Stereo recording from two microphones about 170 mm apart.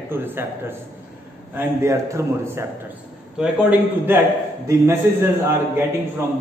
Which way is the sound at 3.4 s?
5° right (ahead or behind).